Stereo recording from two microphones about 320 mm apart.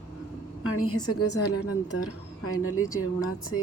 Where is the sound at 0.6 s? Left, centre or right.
Left.